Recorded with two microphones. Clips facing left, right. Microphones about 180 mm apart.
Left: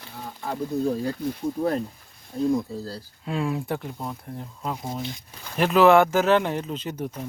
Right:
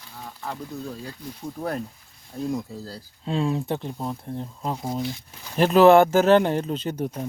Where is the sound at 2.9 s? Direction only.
25° right (ahead or behind).